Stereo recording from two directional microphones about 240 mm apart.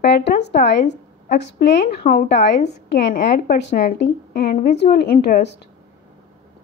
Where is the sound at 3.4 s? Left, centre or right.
Left.